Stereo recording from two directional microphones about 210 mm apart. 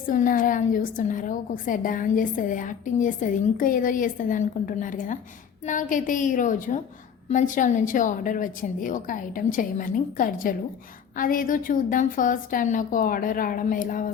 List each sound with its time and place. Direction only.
0.1 s a woman's voice: 40° left (ahead or behind)